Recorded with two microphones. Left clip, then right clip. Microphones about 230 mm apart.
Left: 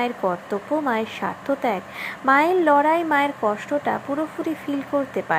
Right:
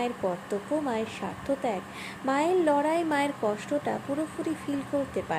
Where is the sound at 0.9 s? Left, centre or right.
Centre.